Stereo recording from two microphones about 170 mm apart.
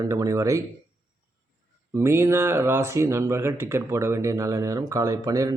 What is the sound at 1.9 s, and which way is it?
Speech, 15° right (ahead or behind).